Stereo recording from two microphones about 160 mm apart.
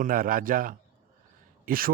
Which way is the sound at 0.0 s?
60° right (ahead or behind).